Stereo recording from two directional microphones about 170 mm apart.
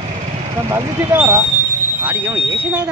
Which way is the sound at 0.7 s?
15° right (ahead or behind).